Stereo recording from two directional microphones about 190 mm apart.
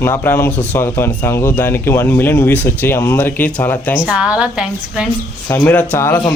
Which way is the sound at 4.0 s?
5° right (ahead or behind).